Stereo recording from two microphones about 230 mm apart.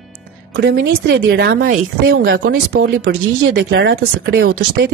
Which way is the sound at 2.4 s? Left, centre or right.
Right.